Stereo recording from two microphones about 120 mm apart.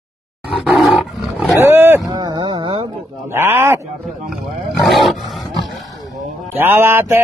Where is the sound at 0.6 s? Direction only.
Centre (ahead or behind).